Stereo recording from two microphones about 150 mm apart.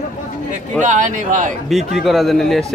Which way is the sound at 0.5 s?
55° right (ahead or behind).